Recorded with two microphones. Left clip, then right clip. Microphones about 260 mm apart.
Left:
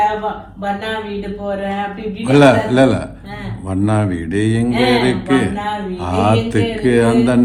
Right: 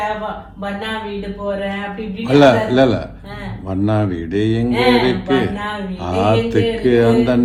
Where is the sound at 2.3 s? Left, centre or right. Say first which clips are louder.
Left 1 dB; left.